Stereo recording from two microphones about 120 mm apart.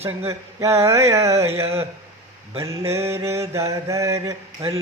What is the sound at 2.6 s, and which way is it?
Mantra, 25° right (ahead or behind).